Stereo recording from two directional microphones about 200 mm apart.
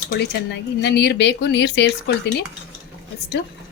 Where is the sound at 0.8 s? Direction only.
60° left (ahead or behind).